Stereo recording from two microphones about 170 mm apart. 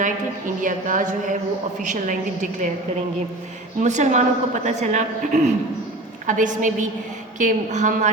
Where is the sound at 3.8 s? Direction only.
45° right (ahead or behind).